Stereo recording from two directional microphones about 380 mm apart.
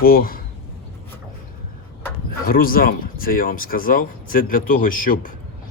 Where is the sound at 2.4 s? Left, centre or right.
Left.